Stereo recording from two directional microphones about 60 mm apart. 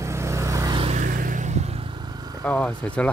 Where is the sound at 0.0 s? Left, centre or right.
Right.